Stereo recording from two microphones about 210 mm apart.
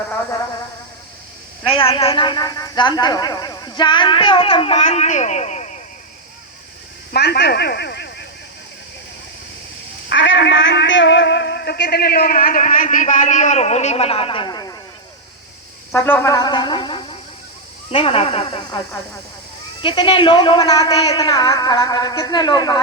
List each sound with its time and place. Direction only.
1.6 s speech: 25° left (ahead or behind)
7.1 s a sound: 50° left (ahead or behind)
10.1 s speech: 60° left (ahead or behind); by 14.8 s 20° left (ahead or behind)
15.9 s speech: 10° left (ahead or behind); by 18.8 s 25° left (ahead or behind)
19.8 s speech: 20° left (ahead or behind)